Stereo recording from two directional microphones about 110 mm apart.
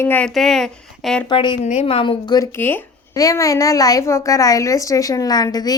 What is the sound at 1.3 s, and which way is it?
Speech, 45° left (ahead or behind).